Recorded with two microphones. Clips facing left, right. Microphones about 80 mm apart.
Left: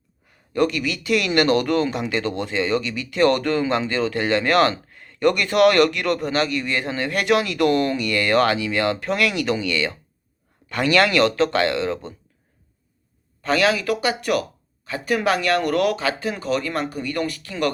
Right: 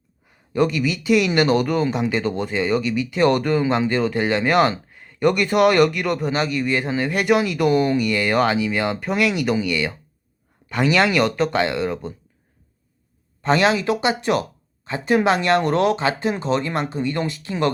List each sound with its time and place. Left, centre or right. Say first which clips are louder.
0.3 s speech: right 1 dB; centre
13.4 s speech: right 2 dB; right